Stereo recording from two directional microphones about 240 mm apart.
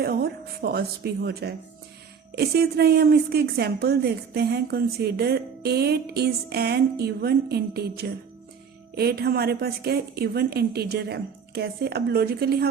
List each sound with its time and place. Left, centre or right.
0.0 s a woman's voice: right